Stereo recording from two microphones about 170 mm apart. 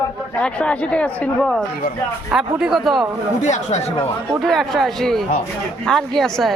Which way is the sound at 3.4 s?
40° left (ahead or behind).